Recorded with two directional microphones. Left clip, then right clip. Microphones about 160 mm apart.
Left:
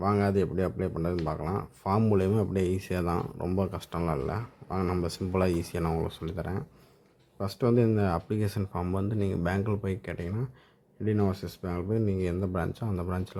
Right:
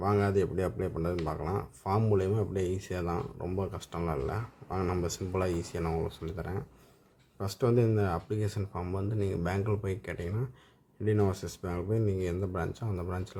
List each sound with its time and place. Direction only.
0.0 s speech: 20° left (ahead or behind)